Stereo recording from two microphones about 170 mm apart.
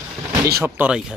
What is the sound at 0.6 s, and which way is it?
Speech, 5° right (ahead or behind).